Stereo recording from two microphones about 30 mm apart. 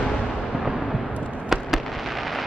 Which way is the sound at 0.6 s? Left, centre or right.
Centre.